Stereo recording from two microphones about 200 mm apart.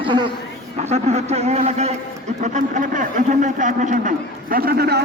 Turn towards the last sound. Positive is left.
turn(degrees=-55)  # may be behind; listen again after turning